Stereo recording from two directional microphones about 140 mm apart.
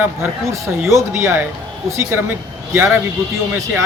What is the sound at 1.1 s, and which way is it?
Speech, 20° right (ahead or behind).